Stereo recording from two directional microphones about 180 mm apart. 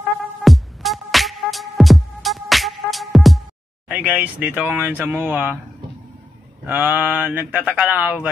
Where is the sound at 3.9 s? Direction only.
5° right (ahead or behind).